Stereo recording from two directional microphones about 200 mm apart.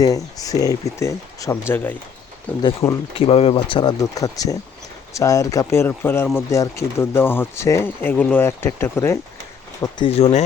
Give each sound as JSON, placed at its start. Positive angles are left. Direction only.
{"t": 0.0, "sound": "speech", "side_deg": 15}
{"t": 2.6, "sound": "speech", "side_deg": 20}
{"t": 10.1, "sound": "speech", "side_deg": 30}